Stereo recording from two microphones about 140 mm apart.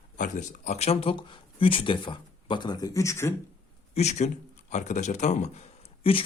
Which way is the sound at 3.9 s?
50° left (ahead or behind).